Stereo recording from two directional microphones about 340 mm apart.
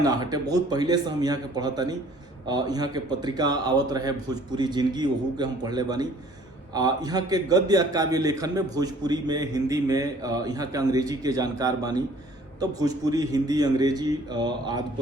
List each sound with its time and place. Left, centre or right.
0.0 s a man's voice: centre